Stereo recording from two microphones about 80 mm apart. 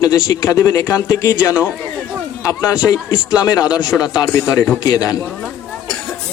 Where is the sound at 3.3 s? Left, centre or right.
Left.